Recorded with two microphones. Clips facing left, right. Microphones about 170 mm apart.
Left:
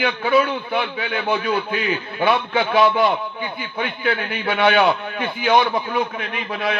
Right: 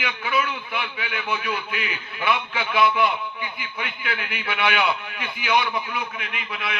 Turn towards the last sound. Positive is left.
turn(degrees=40)  # may be behind; listen again after turning